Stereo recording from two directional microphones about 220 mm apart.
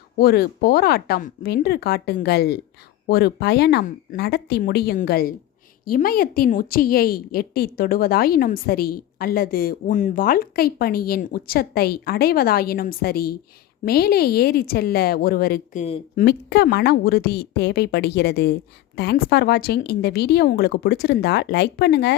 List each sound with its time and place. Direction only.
0.2 s a woman's voice: 45° left (ahead or behind)
16.2 s a woman's voice: 50° left (ahead or behind)